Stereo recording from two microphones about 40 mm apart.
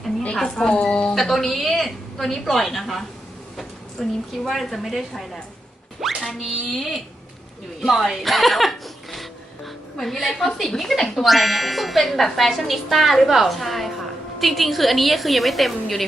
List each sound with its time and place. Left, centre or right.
0.3 s a woman's voice: centre
0.8 s speech: left
1.1 s a woman's voice: centre
4.0 s a woman's voice: centre
10.0 s a woman's voice: centre